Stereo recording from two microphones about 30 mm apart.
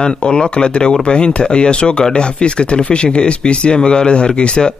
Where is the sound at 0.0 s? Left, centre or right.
Left.